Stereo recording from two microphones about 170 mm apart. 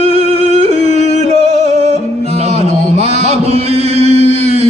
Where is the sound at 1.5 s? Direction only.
40° right (ahead or behind).